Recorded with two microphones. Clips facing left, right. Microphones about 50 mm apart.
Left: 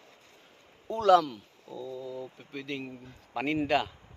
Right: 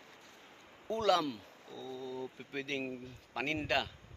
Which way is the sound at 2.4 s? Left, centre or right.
Centre.